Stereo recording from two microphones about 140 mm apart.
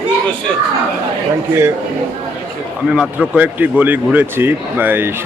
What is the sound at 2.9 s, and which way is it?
Speech, 5° right (ahead or behind).